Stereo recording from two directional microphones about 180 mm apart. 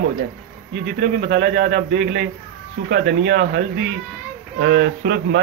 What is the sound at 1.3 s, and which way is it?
A man's voice, 60° right (ahead or behind).